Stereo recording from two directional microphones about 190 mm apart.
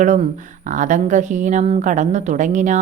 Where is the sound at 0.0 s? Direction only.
35° right (ahead or behind).